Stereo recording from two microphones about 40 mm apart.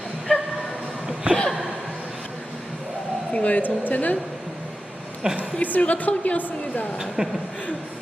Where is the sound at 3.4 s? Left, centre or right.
Left.